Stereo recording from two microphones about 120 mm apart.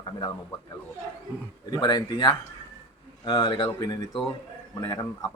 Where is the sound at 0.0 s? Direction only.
40° left (ahead or behind).